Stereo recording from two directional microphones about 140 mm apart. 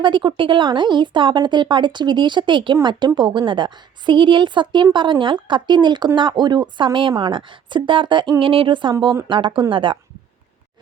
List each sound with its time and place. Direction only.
0.0 s a woman's voice: 35° right (ahead or behind)